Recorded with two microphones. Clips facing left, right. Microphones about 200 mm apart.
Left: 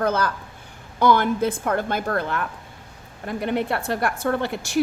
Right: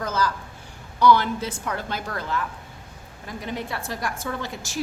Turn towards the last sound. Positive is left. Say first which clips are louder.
# left 7 dB
turn(degrees=60)  # may be behind; listen again after turning